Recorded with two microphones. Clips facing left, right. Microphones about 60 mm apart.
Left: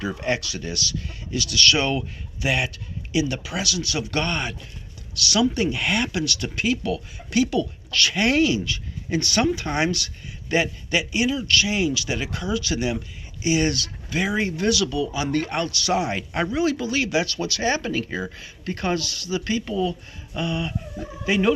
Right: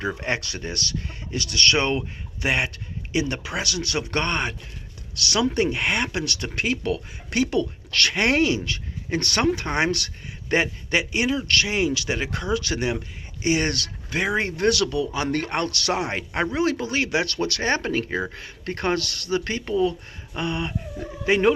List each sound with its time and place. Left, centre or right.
0.1 s speech: right